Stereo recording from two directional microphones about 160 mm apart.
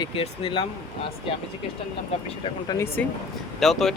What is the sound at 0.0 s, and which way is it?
Speech, 35° left (ahead or behind).